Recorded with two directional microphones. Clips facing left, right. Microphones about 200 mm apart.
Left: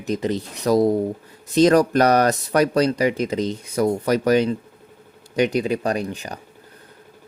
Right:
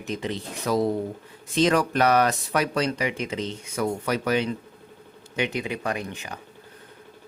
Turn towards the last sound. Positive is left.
turn(degrees=35)  # may be behind; listen again after turning